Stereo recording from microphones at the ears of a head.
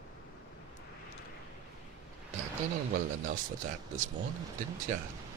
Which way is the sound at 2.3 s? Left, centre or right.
Right.